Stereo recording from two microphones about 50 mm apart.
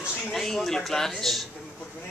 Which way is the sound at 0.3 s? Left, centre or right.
Centre.